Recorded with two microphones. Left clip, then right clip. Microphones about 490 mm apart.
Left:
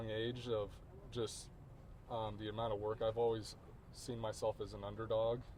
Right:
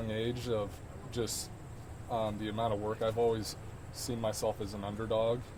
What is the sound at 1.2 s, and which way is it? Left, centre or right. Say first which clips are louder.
Speech: right 6 dB; left.